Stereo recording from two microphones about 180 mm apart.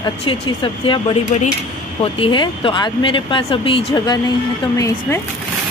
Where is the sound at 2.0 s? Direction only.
30° left (ahead or behind).